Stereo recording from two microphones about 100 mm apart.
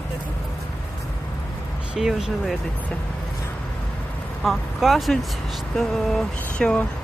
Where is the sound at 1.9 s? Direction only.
5° right (ahead or behind).